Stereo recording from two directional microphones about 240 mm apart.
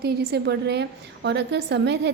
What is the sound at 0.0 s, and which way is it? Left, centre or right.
A woman's voice, right.